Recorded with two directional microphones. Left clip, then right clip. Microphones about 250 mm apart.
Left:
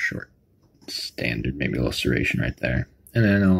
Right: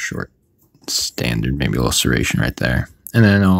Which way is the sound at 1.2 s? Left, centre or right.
Right.